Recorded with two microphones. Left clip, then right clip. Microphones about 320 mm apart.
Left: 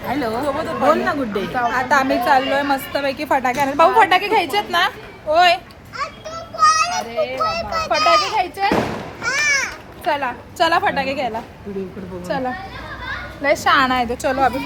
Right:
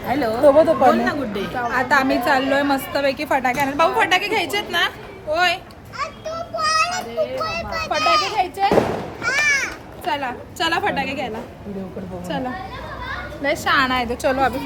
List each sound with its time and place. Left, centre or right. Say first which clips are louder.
0.4 s speech: right 8 dB; right
0.9 s a woman's voice: even; centre
1.7 s a woman's voice: right 1 dB; centre
6.0 s children playing: right 1 dB; centre
7.9 s a woman's voice: left 3 dB; centre
8.4 s a woman's voice: even; centre
9.2 s a sound: even; centre
10.1 s a woman's voice: left 3 dB; centre
12.3 s a woman's voice: left 4 dB; centre